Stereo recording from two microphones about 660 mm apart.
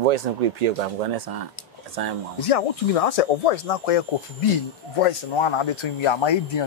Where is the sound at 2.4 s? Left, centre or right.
Left.